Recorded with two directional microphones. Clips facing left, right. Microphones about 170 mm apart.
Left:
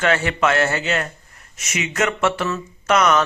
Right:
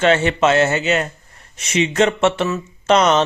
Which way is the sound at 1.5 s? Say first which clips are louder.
Right 8 dB; 30° right (ahead or behind).